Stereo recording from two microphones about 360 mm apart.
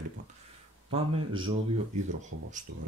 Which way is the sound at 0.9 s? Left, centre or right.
Centre.